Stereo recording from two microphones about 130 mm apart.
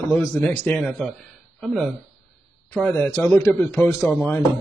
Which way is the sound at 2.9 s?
15° left (ahead or behind).